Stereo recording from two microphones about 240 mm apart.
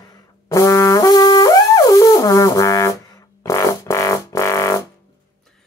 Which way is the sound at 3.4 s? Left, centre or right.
Centre.